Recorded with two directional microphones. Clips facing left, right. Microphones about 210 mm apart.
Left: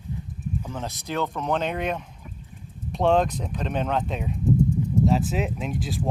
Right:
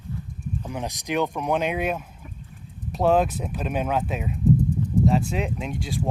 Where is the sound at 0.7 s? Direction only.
15° right (ahead or behind).